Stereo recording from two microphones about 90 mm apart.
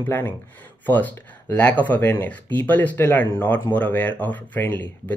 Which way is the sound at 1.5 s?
15° left (ahead or behind).